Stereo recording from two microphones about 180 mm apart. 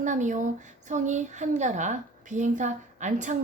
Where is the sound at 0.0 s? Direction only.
45° right (ahead or behind).